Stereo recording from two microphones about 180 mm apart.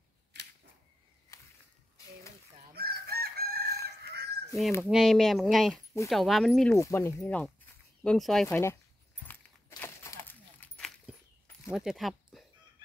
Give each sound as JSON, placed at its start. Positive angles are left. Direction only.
{"t": 0.3, "sound": "a sound", "side_deg": -70}
{"t": 2.7, "sound": "chicken", "side_deg": -60}
{"t": 4.8, "sound": "speech", "side_deg": 0}
{"t": 6.8, "sound": "speech", "side_deg": 15}
{"t": 8.5, "sound": "speech", "side_deg": 15}
{"t": 9.2, "sound": "a sound", "side_deg": 10}
{"t": 11.7, "sound": "speech", "side_deg": 0}